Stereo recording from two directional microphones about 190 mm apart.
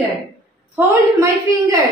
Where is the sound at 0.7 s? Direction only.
15° right (ahead or behind).